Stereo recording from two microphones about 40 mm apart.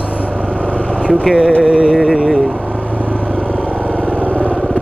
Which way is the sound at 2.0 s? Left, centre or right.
Centre.